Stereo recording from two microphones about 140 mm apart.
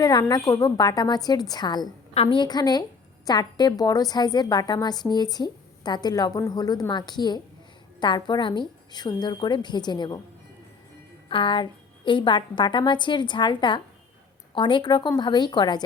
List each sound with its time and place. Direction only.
0.0 s a woman's voice: 30° left (ahead or behind)
11.3 s a woman's voice: 35° left (ahead or behind)